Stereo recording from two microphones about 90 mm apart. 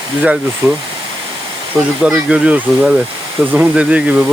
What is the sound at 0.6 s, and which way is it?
Speech, 25° right (ahead or behind).